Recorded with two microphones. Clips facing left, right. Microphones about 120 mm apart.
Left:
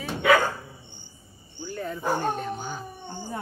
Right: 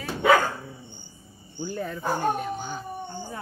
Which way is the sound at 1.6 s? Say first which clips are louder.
Right 3 dB; 15° right (ahead or behind).